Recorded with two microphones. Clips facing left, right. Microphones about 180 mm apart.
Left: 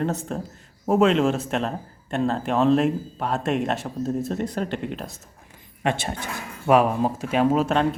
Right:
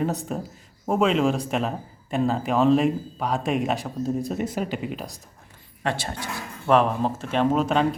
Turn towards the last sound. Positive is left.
turn(degrees=0)  # may be behind; listen again after turning